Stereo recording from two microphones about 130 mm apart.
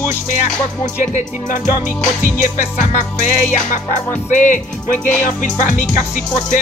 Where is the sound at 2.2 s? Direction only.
90° left; by 4.5 s 70° left (ahead or behind).